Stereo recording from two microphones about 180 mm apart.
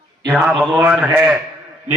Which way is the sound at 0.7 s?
10° right (ahead or behind).